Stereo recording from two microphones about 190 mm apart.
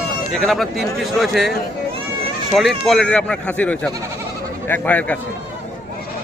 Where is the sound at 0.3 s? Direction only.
Centre (ahead or behind).